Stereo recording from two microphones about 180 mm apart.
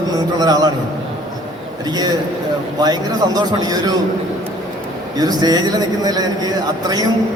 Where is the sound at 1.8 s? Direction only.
20° right (ahead or behind).